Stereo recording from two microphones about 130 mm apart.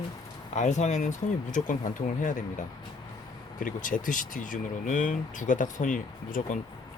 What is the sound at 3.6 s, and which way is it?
Speech, 90° left.